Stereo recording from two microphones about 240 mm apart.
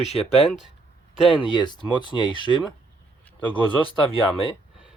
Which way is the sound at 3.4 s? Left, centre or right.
Centre.